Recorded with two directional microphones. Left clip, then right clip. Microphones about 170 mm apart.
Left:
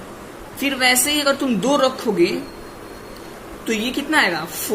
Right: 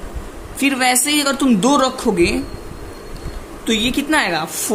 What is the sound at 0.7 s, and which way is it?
Speech, 35° right (ahead or behind).